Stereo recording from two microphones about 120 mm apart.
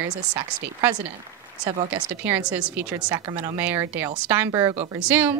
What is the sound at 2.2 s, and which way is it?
A woman's voice, 10° right (ahead or behind).